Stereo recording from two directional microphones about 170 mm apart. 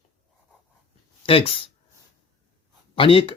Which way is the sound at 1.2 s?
30° left (ahead or behind).